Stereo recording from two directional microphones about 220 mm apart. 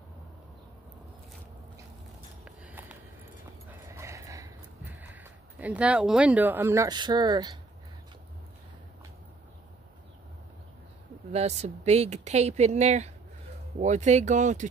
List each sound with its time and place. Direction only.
2.4 s a sound: 5° right (ahead or behind)
5.0 s speech: 10° right (ahead or behind)
11.3 s speech: 30° right (ahead or behind)